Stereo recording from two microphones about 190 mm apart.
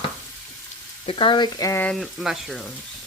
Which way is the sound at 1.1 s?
25° left (ahead or behind).